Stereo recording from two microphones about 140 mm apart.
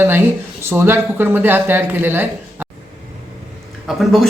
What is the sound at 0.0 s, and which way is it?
Speech, 15° right (ahead or behind).